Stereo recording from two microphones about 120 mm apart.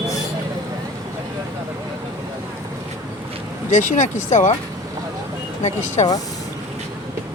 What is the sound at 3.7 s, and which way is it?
Speech, 90° left.